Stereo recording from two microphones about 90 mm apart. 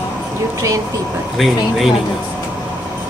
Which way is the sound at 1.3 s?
Centre (ahead or behind).